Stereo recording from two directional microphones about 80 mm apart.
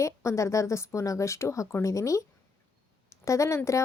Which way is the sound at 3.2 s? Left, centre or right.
Left.